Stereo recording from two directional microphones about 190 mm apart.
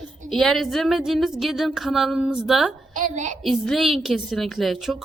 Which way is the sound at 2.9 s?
45° right (ahead or behind).